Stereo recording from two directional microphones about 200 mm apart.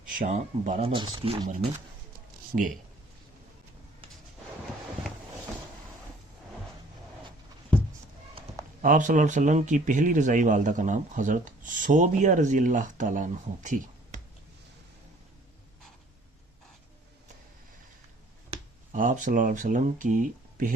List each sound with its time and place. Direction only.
0.1 s speech: 40° right (ahead or behind); by 1.5 s 25° right (ahead or behind)
2.5 s speech: 35° right (ahead or behind)
8.8 s speech: 40° right (ahead or behind)
18.5 s speech: 35° right (ahead or behind)